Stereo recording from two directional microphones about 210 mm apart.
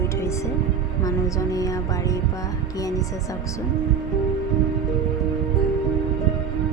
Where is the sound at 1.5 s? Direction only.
15° left (ahead or behind).